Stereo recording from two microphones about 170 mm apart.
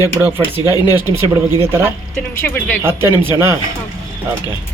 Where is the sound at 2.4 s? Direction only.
10° left (ahead or behind).